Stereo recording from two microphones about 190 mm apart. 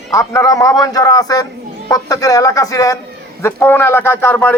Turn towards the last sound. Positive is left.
turn(degrees=10)  # may be behind; listen again after turning